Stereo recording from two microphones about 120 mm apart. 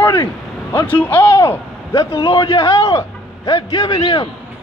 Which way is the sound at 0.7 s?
15° left (ahead or behind).